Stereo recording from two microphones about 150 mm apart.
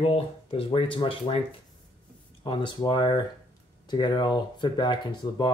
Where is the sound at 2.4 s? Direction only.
30° left (ahead or behind).